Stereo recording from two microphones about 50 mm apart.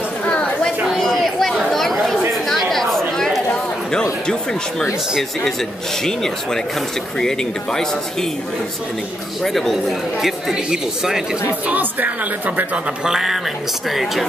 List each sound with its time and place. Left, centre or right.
0.2 s a sound: left
1.0 s a sound: centre
1.7 s chatter: centre
5.4 s speech: centre
9.4 s speech: centre
10.1 s speech: centre
11.6 s a woman's voice: right
13.0 s speech: centre